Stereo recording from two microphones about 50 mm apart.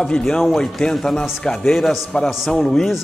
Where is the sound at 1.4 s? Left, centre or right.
Centre.